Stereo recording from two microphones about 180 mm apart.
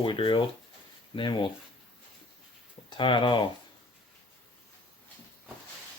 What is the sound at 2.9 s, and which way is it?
Speech, 25° left (ahead or behind).